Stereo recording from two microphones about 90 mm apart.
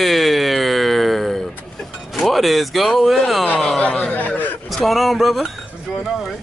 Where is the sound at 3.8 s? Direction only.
15° left (ahead or behind).